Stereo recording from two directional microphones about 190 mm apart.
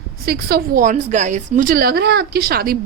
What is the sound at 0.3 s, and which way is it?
A woman's voice, 55° right (ahead or behind).